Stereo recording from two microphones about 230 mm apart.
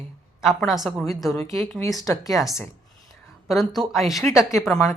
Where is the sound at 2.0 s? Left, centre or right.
Centre.